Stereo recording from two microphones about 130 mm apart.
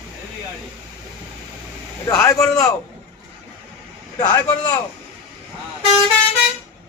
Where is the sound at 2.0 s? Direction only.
25° left (ahead or behind).